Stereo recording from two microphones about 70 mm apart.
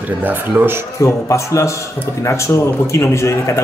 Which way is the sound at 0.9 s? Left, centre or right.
Left.